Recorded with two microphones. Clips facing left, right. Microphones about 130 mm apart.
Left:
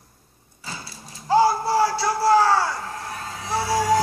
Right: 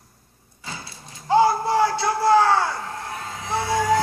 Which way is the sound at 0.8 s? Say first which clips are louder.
Even; 20° right (ahead or behind).